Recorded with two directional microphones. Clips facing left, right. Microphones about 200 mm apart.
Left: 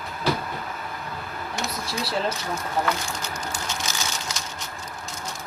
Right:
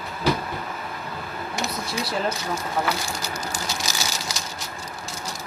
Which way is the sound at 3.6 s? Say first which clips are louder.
Right 1 dB; 35° right (ahead or behind).